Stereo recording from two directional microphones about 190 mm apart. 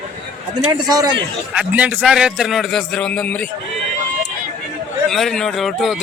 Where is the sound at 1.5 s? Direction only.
5° right (ahead or behind).